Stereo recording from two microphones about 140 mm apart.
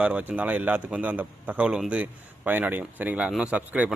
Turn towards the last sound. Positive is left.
turn(degrees=-10)  # may be behind; listen again after turning